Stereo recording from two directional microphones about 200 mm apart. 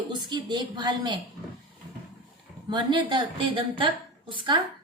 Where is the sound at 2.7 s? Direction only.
25° right (ahead or behind).